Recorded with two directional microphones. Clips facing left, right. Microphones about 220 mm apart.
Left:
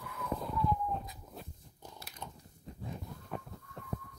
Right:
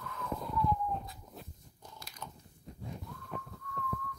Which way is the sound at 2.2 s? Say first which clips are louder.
Even; 15° left (ahead or behind).